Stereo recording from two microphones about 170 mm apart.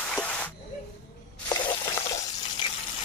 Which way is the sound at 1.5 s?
25° left (ahead or behind).